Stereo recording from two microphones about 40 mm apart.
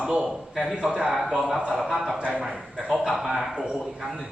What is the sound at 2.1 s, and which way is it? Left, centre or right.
Speech, right.